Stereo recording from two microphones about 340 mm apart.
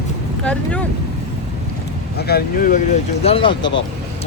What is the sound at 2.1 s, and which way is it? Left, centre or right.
Speech, left.